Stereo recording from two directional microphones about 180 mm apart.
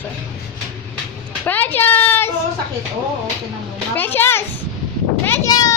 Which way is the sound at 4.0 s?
10° left (ahead or behind).